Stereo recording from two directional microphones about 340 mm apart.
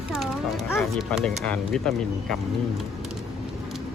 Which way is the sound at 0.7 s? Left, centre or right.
Centre.